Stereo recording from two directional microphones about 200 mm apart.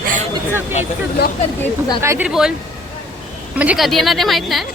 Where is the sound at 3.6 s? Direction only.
5° right (ahead or behind).